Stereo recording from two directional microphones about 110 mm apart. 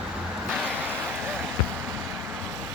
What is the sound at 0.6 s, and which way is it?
Vehicle, 15° right (ahead or behind).